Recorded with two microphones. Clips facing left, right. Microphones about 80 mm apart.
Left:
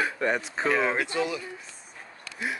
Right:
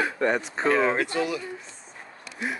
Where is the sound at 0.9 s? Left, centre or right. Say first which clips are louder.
Right 2 dB; left.